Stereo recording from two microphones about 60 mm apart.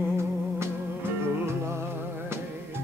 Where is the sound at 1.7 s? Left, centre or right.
Right.